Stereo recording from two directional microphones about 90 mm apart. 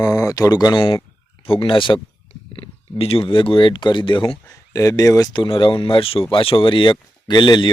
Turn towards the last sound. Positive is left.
turn(degrees=55)  # may be behind; listen again after turning